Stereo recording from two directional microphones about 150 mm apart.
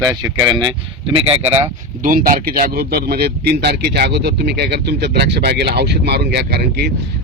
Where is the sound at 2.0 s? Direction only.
65° right (ahead or behind).